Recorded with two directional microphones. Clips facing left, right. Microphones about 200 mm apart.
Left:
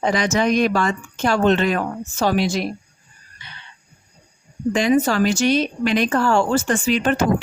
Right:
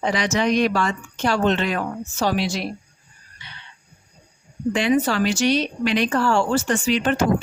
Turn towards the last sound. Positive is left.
turn(degrees=50)  # may be behind; listen again after turning